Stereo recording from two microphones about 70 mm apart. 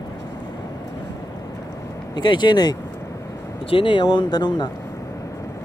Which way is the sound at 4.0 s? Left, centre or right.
Left.